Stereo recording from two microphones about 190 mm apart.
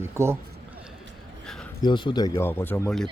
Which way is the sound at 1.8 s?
25° left (ahead or behind).